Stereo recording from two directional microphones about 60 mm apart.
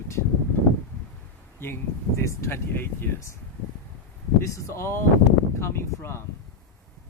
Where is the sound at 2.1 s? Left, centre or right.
Left.